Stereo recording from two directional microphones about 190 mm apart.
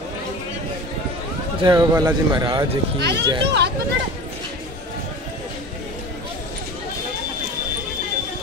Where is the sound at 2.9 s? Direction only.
65° right (ahead or behind).